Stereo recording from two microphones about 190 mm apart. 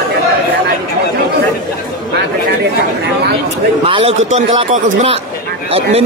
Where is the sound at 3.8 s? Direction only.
30° right (ahead or behind).